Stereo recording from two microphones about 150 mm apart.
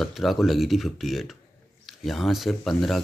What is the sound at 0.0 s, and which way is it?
Speech, centre (ahead or behind).